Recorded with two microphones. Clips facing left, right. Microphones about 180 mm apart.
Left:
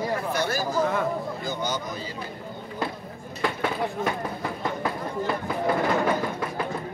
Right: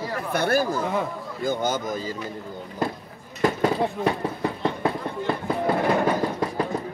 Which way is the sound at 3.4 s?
40° right (ahead or behind).